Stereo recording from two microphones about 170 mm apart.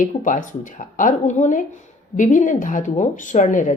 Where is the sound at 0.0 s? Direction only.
50° left (ahead or behind).